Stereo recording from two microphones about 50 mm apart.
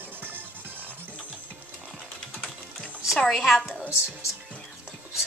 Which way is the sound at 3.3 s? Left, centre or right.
Centre.